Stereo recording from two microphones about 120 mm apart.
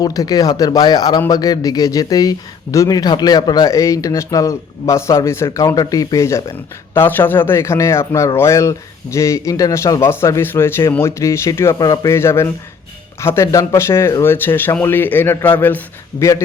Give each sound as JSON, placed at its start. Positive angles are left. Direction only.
{"t": 0.0, "sound": "speech", "side_deg": 30}
{"t": 16.1, "sound": "speech", "side_deg": 45}